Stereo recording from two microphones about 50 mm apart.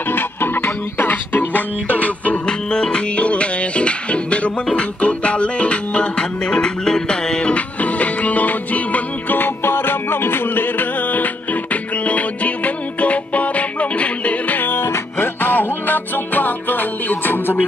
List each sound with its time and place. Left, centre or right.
0.1 s music: left
2.4 s music: centre
14.6 s music: left